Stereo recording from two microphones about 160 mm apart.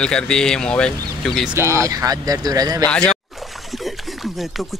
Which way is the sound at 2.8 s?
5° left (ahead or behind).